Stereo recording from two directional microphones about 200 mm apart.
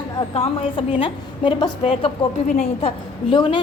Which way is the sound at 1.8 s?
35° left (ahead or behind).